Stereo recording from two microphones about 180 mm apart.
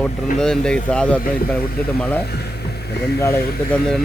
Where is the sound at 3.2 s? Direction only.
15° left (ahead or behind).